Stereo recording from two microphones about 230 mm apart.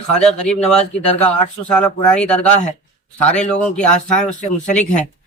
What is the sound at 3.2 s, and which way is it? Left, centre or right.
Speech, centre.